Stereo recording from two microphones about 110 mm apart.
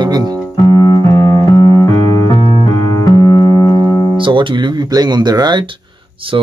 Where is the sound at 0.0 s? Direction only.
40° right (ahead or behind).